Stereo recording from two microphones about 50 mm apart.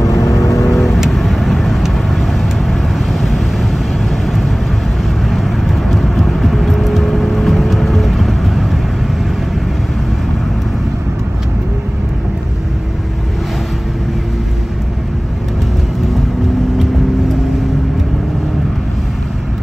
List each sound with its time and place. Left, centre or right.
0.0 s vehicle: left
0.7 s vehicle: centre